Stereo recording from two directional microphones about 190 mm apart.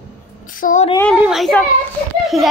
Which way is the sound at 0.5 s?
45° left (ahead or behind).